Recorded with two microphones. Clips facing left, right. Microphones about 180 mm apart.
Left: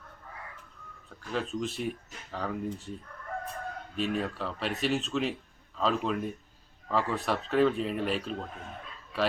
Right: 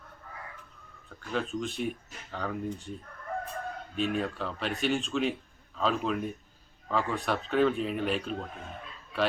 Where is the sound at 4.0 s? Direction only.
Centre (ahead or behind).